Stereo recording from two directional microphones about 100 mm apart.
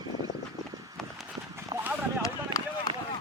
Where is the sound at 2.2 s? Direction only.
35° left (ahead or behind).